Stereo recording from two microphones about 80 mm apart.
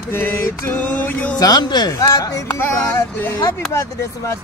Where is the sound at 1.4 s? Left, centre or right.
Left.